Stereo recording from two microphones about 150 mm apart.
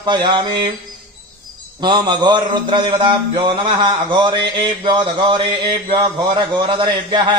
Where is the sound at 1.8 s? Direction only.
30° right (ahead or behind).